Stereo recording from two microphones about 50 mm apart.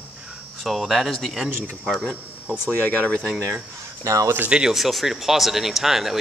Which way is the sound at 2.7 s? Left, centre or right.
Left.